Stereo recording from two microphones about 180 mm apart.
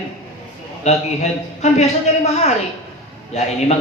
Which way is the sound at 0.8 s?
35° left (ahead or behind).